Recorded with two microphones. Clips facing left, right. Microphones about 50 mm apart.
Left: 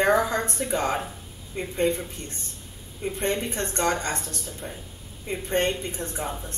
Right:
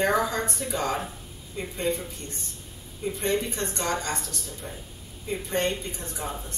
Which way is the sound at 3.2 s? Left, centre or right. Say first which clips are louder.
Even; left.